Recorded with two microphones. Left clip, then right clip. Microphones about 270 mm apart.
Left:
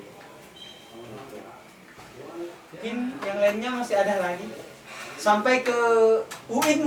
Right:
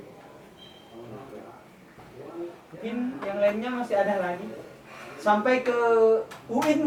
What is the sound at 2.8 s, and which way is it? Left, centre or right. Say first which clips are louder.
Speech: left 1 dB; centre.